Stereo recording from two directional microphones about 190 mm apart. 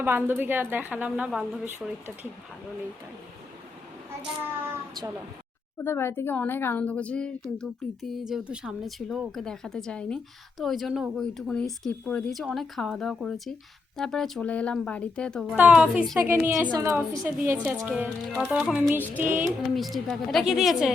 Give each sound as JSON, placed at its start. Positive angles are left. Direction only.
{"t": 0.0, "sound": "a woman's voice", "side_deg": -10}
{"t": 5.8, "sound": "a woman's voice", "side_deg": 10}
{"t": 19.7, "sound": "speech", "side_deg": 0}